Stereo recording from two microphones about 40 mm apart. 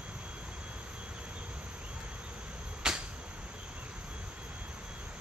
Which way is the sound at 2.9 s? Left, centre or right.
Centre.